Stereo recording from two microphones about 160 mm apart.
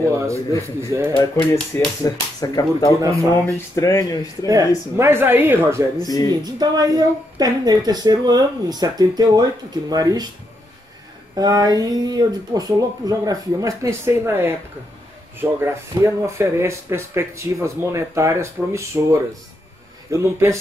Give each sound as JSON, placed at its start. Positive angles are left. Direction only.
{"t": 0.7, "sound": "speech", "side_deg": -15}
{"t": 1.1, "sound": "speech", "side_deg": 15}
{"t": 3.0, "sound": "a woman's voice", "side_deg": -20}
{"t": 3.7, "sound": "speech", "side_deg": 20}
{"t": 4.5, "sound": "speech", "side_deg": -20}
{"t": 6.0, "sound": "speech", "side_deg": 20}
{"t": 6.4, "sound": "a woman's voice", "side_deg": -25}
{"t": 11.3, "sound": "a woman's voice", "side_deg": -25}
{"t": 15.6, "sound": "a woman's voice", "side_deg": -15}